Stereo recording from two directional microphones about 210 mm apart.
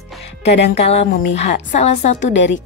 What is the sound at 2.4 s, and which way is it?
Speech, 60° left (ahead or behind).